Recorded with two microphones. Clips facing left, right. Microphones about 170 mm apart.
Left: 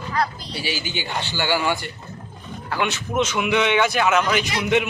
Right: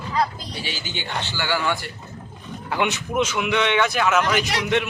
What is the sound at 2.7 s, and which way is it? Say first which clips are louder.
Speech: even; 15° right (ahead or behind).